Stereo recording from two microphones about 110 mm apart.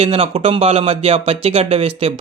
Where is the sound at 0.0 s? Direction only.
60° right (ahead or behind).